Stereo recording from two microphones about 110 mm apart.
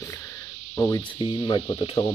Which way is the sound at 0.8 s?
30° left (ahead or behind).